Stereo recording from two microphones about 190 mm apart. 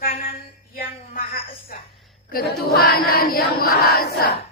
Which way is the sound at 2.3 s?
50° left (ahead or behind).